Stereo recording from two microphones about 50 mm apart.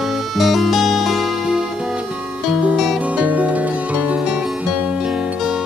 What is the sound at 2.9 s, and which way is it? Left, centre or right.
Music, right.